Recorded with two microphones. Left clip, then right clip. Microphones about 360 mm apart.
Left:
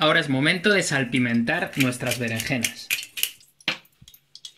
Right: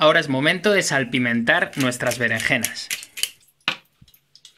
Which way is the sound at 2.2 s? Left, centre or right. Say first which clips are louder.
Right 7 dB; right.